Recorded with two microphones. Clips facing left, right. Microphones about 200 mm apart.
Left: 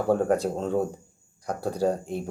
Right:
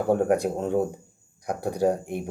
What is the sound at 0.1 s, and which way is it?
Speech, 15° right (ahead or behind).